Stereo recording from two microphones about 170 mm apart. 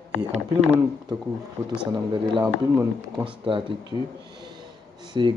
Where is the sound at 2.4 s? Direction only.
20° right (ahead or behind).